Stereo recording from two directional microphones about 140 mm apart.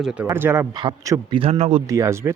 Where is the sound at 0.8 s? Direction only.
30° right (ahead or behind).